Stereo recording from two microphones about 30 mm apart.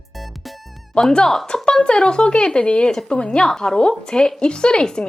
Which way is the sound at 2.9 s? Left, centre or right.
Left.